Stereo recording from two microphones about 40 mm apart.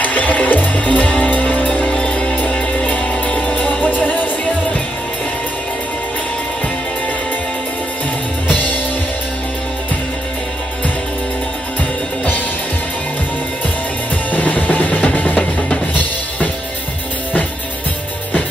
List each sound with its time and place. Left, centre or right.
0.0 s music: left
1.9 s music: left
8.5 s music: left
14.3 s music: left